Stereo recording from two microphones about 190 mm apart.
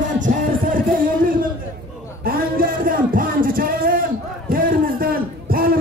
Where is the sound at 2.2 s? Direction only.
50° right (ahead or behind).